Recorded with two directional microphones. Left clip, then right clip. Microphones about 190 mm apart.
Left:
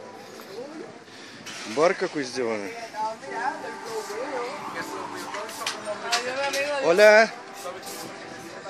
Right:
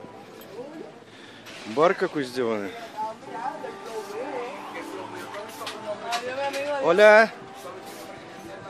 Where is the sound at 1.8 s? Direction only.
10° right (ahead or behind).